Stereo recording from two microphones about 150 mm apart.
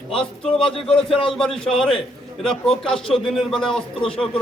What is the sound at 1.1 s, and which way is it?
Speech, 40° left (ahead or behind).